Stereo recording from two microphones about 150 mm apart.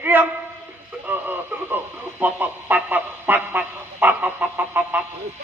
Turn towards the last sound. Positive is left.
turn(degrees=-10)  # may be behind; listen again after turning